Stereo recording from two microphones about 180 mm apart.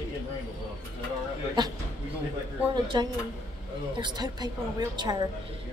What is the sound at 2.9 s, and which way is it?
A woman's voice, 25° right (ahead or behind).